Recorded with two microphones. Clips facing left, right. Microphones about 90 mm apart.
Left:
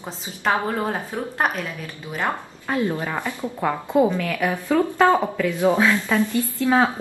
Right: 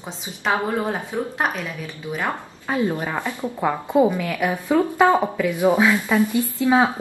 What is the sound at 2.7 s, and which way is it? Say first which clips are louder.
A woman's voice: right 1 dB; 15° right (ahead or behind).